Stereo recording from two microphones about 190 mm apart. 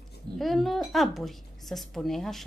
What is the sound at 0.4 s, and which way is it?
Speech, centre (ahead or behind).